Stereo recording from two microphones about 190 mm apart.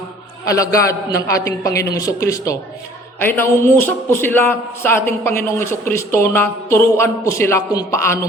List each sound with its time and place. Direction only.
0.4 s a man's voice: 15° left (ahead or behind)